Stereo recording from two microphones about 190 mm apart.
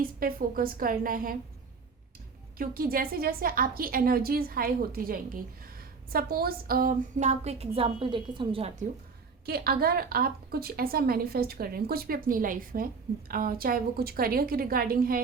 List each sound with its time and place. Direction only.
0.0 s a woman's voice: 50° right (ahead or behind)
2.6 s a woman's voice: 50° right (ahead or behind); by 8.7 s 25° right (ahead or behind)
9.5 s a woman's voice: 50° right (ahead or behind)